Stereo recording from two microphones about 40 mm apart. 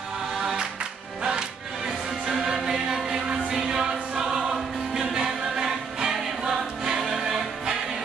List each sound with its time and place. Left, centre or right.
0.3 s music: centre
1.9 s music: centre
5.1 s choir: centre